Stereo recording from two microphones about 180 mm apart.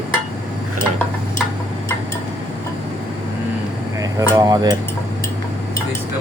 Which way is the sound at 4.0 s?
20° right (ahead or behind).